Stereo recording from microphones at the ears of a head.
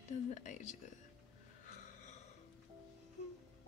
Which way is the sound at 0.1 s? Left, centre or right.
Left.